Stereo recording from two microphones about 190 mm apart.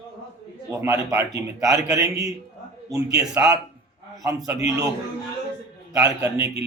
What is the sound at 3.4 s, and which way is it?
Speech, 10° right (ahead or behind).